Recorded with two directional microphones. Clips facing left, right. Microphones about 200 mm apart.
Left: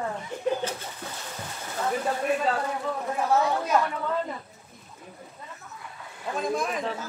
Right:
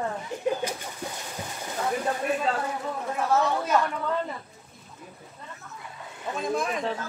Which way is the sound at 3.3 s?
10° left (ahead or behind).